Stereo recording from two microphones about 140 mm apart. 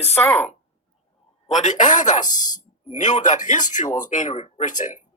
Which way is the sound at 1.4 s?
60° left (ahead or behind).